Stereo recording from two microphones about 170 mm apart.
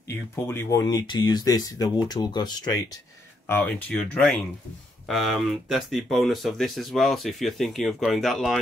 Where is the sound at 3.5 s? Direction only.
10° left (ahead or behind).